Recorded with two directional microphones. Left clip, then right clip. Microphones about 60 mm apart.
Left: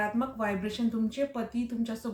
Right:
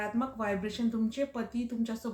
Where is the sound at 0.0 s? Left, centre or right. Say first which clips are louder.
Left 3 dB; right.